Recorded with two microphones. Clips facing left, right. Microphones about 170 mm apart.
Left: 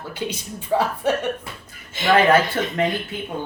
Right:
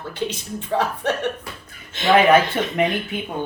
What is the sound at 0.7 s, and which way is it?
Speech, 10° left (ahead or behind).